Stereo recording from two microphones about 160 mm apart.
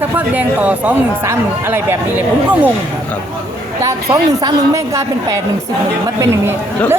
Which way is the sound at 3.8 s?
20° right (ahead or behind).